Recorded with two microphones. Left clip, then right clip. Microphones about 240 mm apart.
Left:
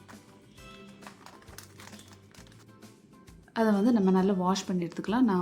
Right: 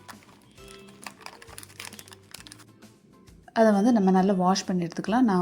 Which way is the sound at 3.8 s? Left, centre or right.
Centre.